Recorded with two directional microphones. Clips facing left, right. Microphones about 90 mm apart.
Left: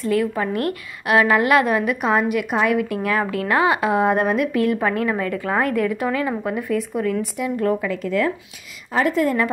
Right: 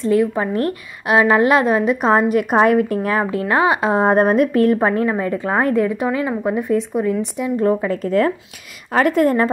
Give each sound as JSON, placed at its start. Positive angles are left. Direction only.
{"t": 0.0, "sound": "a woman's voice", "side_deg": -25}
{"t": 3.9, "sound": "a woman's voice", "side_deg": -35}
{"t": 7.9, "sound": "a woman's voice", "side_deg": -40}
{"t": 8.9, "sound": "a woman's voice", "side_deg": -55}